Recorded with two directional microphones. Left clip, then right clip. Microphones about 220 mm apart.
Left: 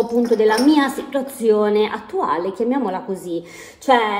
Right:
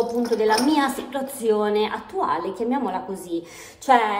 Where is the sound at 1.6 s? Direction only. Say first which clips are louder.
Left 4 dB; 10° right (ahead or behind).